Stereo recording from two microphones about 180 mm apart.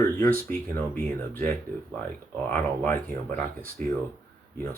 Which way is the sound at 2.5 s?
10° left (ahead or behind).